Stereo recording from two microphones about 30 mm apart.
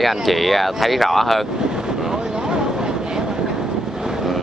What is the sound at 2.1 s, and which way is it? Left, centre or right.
Train, right.